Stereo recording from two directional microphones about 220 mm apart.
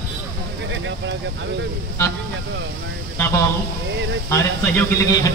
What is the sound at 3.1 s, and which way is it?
Speech, 10° left (ahead or behind).